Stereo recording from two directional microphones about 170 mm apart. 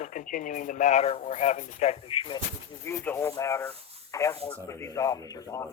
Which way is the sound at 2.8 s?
15° left (ahead or behind).